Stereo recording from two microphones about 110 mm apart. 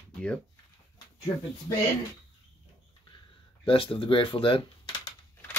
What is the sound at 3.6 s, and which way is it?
Speech, 55° left (ahead or behind).